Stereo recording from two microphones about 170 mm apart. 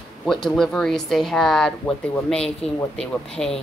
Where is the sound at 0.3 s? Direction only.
Centre (ahead or behind).